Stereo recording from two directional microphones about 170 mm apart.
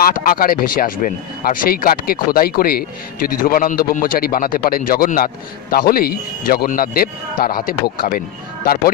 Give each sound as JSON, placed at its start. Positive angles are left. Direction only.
{"t": 0.0, "sound": "a man's voice", "side_deg": 55}